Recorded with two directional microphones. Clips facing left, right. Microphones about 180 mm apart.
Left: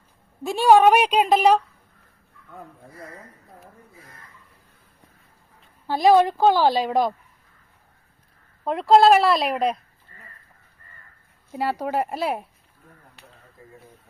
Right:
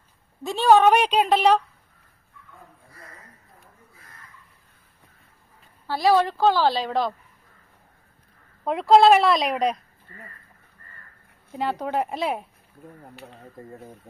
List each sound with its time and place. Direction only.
0.4 s a woman's voice: 10° left (ahead or behind)
5.9 s a woman's voice: 20° left (ahead or behind)
8.6 s a woman's voice: centre (ahead or behind)
11.5 s a woman's voice: 5° left (ahead or behind)
13.6 s speech: 50° right (ahead or behind)